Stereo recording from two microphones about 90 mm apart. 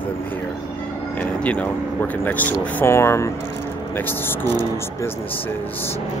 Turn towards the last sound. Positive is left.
turn(degrees=25)  # may be behind; listen again after turning